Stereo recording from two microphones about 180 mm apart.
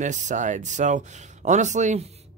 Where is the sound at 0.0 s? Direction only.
40° right (ahead or behind).